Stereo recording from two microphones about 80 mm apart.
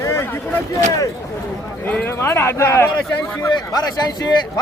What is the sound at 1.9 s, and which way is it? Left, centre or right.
Speech, centre.